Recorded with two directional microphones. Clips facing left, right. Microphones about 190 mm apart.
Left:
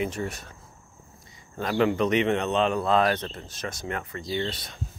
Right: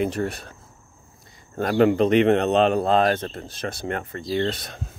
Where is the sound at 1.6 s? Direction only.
50° right (ahead or behind).